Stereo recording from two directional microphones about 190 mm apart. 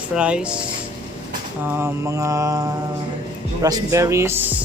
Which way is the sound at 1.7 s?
15° right (ahead or behind).